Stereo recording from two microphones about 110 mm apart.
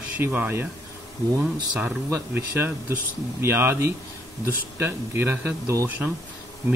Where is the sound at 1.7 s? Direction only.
10° right (ahead or behind).